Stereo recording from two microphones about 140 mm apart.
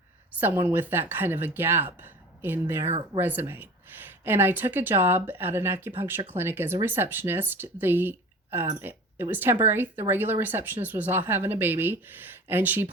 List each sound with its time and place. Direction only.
0.3 s speech: 15° right (ahead or behind)